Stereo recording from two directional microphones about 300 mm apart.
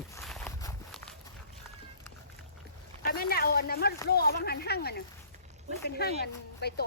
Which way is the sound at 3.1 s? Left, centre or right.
Left.